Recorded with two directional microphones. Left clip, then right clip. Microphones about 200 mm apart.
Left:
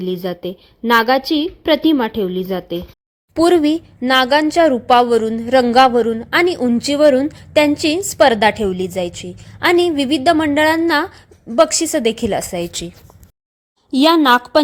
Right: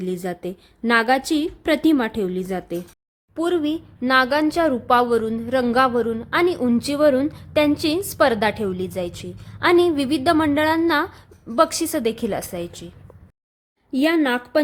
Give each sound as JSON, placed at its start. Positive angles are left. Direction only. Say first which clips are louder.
{"t": 0.0, "sound": "a woman's voice", "louder": "left 5 dB", "side_deg": 0}
{"t": 3.3, "sound": "a woman's voice", "louder": "left 9 dB", "side_deg": 25}
{"t": 13.9, "sound": "a woman's voice", "louder": "left 8 dB", "side_deg": 30}